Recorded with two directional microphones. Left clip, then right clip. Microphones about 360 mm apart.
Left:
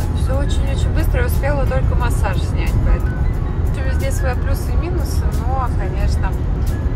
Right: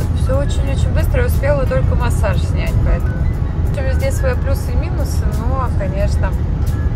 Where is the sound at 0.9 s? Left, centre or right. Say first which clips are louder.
Right 3 dB; centre.